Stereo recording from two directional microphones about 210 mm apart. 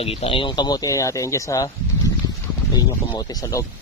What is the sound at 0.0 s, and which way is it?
Speech, 30° left (ahead or behind).